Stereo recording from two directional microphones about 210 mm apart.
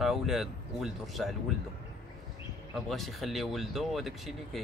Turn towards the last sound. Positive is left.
turn(degrees=0)  # may be behind; listen again after turning